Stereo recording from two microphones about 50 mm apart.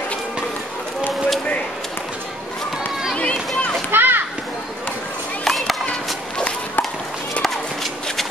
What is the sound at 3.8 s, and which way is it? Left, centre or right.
Children playing, right.